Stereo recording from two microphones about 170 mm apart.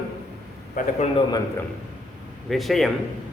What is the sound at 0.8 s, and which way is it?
Speech, 50° left (ahead or behind).